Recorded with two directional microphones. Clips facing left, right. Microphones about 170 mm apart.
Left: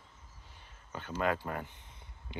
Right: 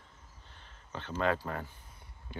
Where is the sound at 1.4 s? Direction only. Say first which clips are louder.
Even; 20° left (ahead or behind).